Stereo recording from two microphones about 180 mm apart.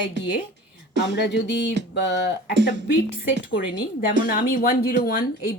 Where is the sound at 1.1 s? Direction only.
70° left (ahead or behind).